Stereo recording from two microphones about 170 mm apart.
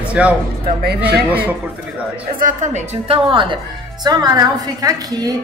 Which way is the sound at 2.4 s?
50° right (ahead or behind).